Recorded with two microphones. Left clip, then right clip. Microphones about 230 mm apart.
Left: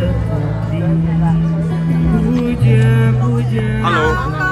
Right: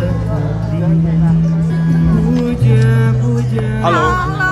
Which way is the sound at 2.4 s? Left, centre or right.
Centre.